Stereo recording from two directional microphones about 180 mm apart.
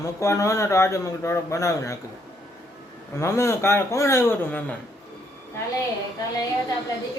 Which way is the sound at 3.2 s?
15° left (ahead or behind).